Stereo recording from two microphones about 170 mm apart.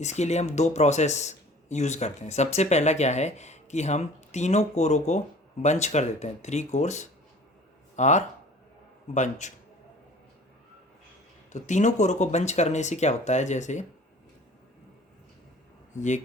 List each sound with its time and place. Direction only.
0.0 s speech: 40° left (ahead or behind)
11.5 s speech: 45° left (ahead or behind)
16.0 s speech: 45° left (ahead or behind)